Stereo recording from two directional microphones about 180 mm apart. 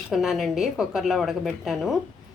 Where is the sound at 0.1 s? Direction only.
Centre (ahead or behind).